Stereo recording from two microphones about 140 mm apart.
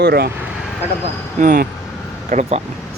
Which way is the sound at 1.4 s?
85° right.